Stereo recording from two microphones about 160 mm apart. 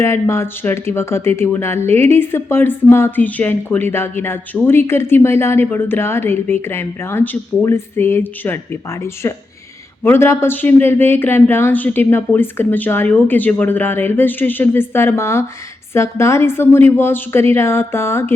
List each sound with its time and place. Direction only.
0.0 s a woman's voice: 15° left (ahead or behind)